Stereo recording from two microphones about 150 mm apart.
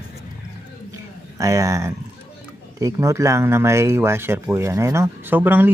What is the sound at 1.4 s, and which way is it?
A man's voice, 20° right (ahead or behind).